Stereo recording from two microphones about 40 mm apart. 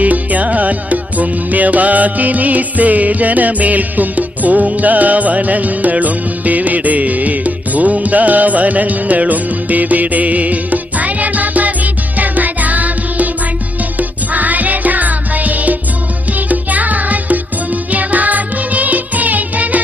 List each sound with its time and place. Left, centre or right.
0.0 s music: right
14.3 s music: right